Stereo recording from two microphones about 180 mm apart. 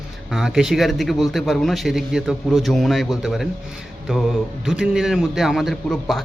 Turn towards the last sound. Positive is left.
turn(degrees=0)  # may be behind; listen again after turning